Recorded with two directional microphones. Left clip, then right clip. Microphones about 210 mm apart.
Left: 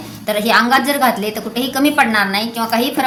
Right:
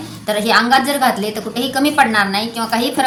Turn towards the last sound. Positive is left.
turn(degrees=10)  # may be behind; listen again after turning